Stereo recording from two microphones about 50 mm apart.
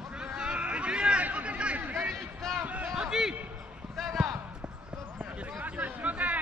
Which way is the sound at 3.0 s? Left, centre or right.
Centre.